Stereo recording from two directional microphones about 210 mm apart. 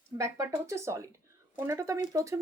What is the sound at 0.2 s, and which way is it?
Speech, 15° right (ahead or behind).